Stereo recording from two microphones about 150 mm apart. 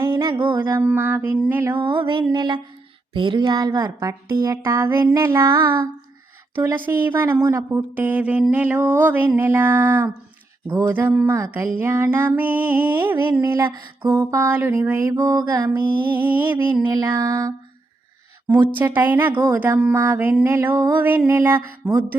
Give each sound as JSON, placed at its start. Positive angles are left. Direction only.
{"t": 0.0, "sound": "music", "side_deg": -20}
{"t": 0.3, "sound": "mantra", "side_deg": -30}
{"t": 0.7, "sound": "speech", "side_deg": -15}
{"t": 1.8, "sound": "mantra", "side_deg": -30}
{"t": 3.1, "sound": "speech", "side_deg": -35}
{"t": 6.6, "sound": "speech", "side_deg": -15}
{"t": 16.9, "sound": "speech", "side_deg": -25}
{"t": 19.3, "sound": "speech", "side_deg": -25}
{"t": 19.5, "sound": "speech", "side_deg": -10}